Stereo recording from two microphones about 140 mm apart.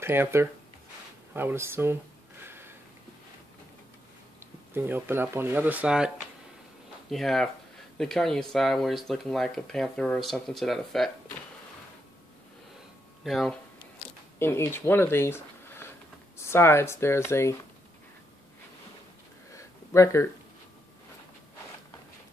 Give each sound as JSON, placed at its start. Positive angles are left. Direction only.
{"t": 0.0, "sound": "speech", "side_deg": -15}
{"t": 2.4, "sound": "a sound", "side_deg": -15}
{"t": 4.4, "sound": "speech", "side_deg": -15}
{"t": 13.2, "sound": "speech", "side_deg": 0}
{"t": 14.4, "sound": "speech", "side_deg": 15}
{"t": 19.5, "sound": "a sound", "side_deg": 20}